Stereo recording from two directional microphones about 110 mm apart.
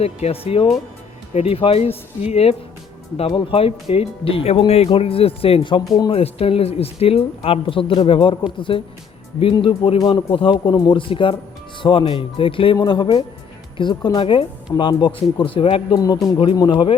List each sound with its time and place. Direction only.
0.0 s speech: 70° left (ahead or behind)
3.2 s speech: 55° left (ahead or behind)
10.2 s speech: 50° left (ahead or behind)